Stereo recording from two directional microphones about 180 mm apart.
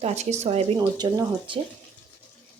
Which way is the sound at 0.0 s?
40° right (ahead or behind).